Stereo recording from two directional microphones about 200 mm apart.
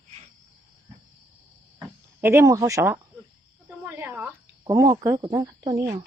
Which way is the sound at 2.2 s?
15° right (ahead or behind).